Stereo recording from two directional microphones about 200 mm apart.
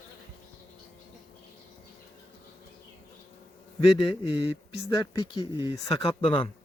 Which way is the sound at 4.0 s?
25° left (ahead or behind).